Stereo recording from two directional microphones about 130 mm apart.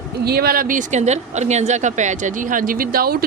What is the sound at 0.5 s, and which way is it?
Speech, 90° right.